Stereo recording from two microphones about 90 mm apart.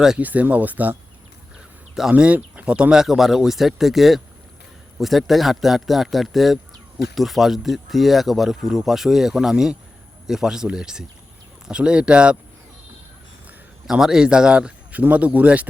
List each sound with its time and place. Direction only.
0.2 s speech: 20° right (ahead or behind)
2.0 s speech: 10° right (ahead or behind)
13.8 s speech: 5° right (ahead or behind)